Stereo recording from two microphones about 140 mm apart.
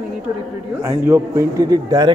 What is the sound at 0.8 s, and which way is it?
A man's voice, 20° right (ahead or behind).